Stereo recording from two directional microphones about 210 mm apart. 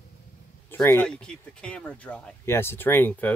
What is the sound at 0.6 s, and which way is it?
Speech, 10° left (ahead or behind).